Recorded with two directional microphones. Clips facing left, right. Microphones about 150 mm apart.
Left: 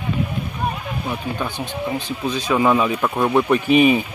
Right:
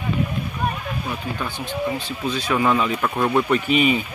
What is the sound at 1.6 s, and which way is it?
Speech, 15° left (ahead or behind).